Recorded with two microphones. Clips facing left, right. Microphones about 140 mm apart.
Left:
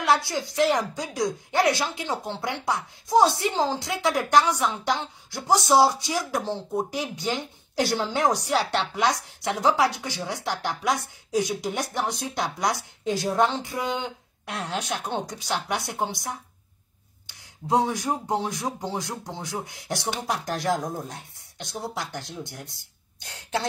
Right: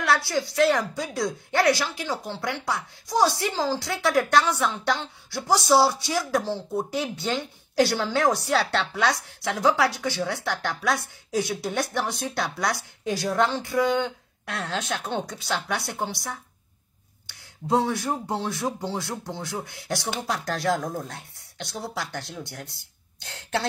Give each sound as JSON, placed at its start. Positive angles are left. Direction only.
{"t": 0.0, "sound": "a woman's voice", "side_deg": 20}